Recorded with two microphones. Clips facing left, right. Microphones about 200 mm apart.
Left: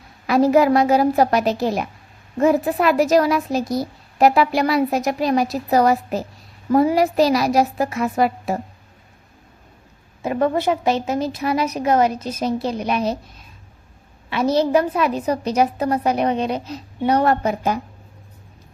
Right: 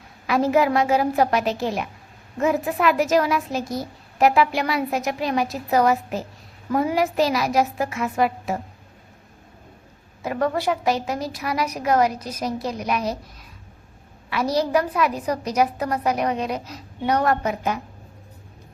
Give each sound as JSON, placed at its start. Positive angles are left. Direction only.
{"t": 0.3, "sound": "a woman's voice", "side_deg": 35}
{"t": 10.2, "sound": "a woman's voice", "side_deg": 25}
{"t": 14.3, "sound": "a woman's voice", "side_deg": 25}